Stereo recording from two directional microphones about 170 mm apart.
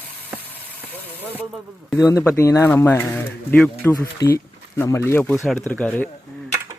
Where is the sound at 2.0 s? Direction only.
20° left (ahead or behind).